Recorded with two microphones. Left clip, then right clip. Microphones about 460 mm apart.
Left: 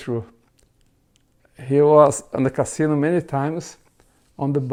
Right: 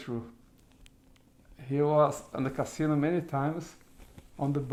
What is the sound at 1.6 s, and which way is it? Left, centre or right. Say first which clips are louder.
Speech: left 12 dB; left.